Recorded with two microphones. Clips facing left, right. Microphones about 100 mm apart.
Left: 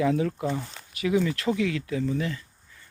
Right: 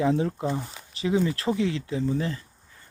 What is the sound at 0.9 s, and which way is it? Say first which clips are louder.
Speech: even; 25° right (ahead or behind).